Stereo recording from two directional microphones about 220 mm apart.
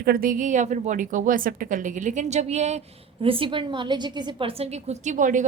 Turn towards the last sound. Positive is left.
turn(degrees=-35)  # may be behind; listen again after turning